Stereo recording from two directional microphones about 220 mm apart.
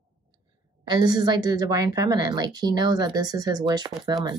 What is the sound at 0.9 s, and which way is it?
A woman's voice, 20° right (ahead or behind).